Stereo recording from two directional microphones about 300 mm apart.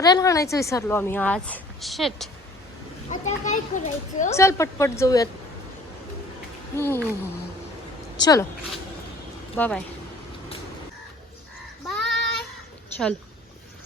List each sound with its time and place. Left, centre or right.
0.0 s a woman's voice: centre
3.1 s a child's voice: left
4.4 s a woman's voice: centre
6.7 s a woman's voice: centre
8.2 s a woman's voice: centre
9.6 s speech: centre
11.9 s child singing: centre